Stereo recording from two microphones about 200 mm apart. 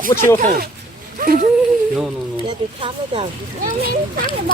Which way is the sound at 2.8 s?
30° right (ahead or behind).